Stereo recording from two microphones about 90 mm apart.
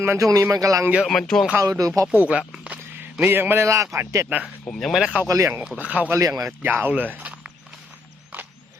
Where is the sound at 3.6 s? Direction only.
35° right (ahead or behind).